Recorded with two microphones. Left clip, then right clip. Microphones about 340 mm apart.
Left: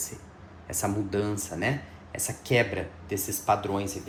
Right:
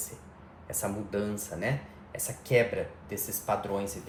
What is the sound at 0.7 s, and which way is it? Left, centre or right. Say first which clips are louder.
Speech: left 4 dB; left.